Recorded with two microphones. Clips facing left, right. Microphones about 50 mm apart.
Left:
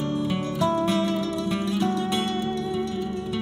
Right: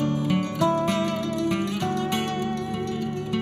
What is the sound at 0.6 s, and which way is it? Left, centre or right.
Music, right.